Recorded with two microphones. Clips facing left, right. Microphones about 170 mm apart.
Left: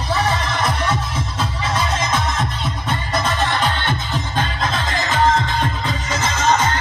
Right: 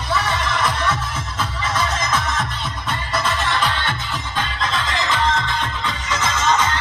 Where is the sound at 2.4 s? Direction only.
40° left (ahead or behind).